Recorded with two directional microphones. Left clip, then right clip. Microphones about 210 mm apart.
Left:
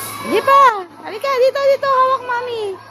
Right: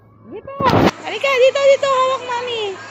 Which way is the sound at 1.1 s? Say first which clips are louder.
Left 2 dB; 15° left (ahead or behind).